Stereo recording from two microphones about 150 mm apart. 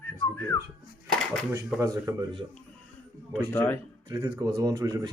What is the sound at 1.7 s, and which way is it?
Speech, 20° right (ahead or behind).